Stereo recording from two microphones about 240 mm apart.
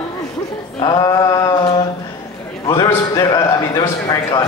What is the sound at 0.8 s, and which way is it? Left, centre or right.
A man's voice, centre.